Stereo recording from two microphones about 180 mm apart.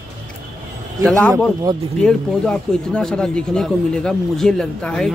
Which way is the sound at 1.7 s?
25° right (ahead or behind).